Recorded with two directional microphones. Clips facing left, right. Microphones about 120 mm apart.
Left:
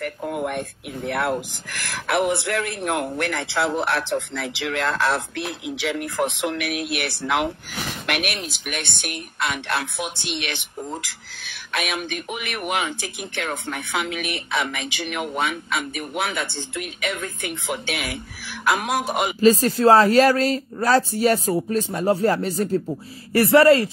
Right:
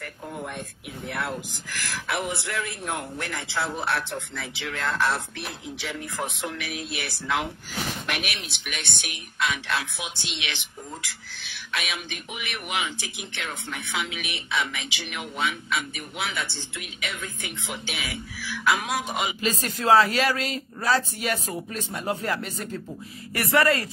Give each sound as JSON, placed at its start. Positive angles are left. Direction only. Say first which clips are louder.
{"t": 0.0, "sound": "speech", "louder": "left 9 dB", "side_deg": 75}
{"t": 8.1, "sound": "speech", "louder": "left 9 dB", "side_deg": 60}
{"t": 8.4, "sound": "speech", "louder": "left 6 dB", "side_deg": 45}
{"t": 19.4, "sound": "speech", "louder": "left 13 dB", "side_deg": 35}